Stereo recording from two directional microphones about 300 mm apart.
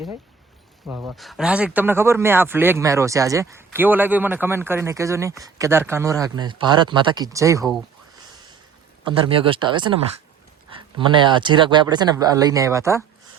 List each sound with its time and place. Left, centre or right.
0.9 s speech: centre
9.0 s speech: centre